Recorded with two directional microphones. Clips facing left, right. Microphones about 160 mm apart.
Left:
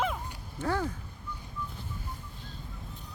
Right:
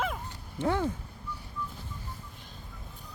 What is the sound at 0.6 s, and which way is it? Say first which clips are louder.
Speech: right 3 dB; 20° right (ahead or behind).